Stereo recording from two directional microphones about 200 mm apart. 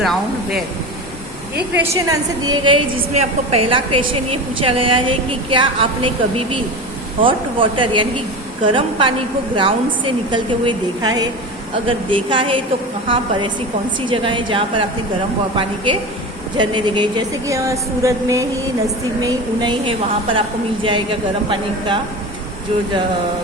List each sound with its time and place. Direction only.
0.0 s speech: centre (ahead or behind)
1.7 s a woman's voice: 15° right (ahead or behind)
14.1 s a woman's voice: 25° right (ahead or behind)